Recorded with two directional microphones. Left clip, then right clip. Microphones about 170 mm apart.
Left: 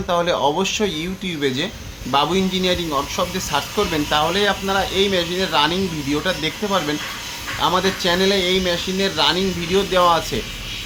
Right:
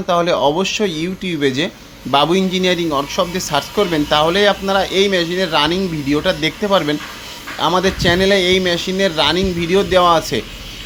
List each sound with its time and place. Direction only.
0.1 s a man's voice: 25° right (ahead or behind)